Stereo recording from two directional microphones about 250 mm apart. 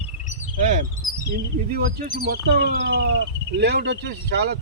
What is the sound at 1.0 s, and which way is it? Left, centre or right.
Bird, centre.